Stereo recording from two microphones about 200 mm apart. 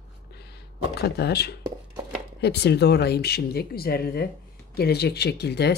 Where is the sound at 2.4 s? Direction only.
55° left (ahead or behind).